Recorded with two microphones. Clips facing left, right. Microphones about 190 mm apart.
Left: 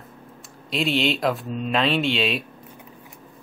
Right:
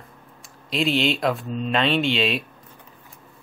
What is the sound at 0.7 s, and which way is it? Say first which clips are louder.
Speech: right 1 dB; centre (ahead or behind).